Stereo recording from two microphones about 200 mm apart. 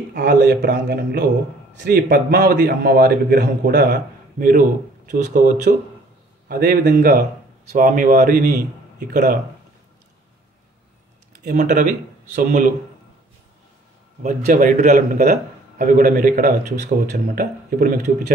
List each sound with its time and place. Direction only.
0.1 s a man's voice: 45° right (ahead or behind)
11.4 s a man's voice: 40° right (ahead or behind)
14.2 s a man's voice: 40° right (ahead or behind)